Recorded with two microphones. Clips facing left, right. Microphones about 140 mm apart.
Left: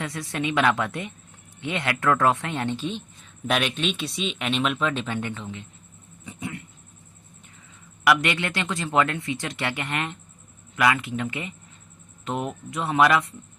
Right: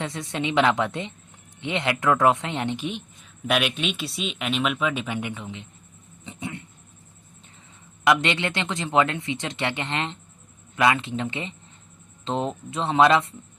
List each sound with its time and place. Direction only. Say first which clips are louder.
0.0 s speech: even; 25° right (ahead or behind)
6.2 s a sound: even; 25° right (ahead or behind)
8.0 s speech: right 1 dB; 25° right (ahead or behind)